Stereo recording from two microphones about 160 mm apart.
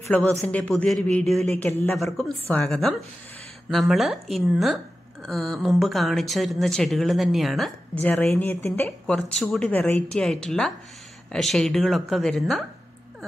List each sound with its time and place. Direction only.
0.1 s speech: 10° left (ahead or behind)